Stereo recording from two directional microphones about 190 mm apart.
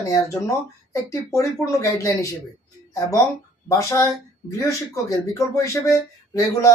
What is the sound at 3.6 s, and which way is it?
Speech, 15° left (ahead or behind).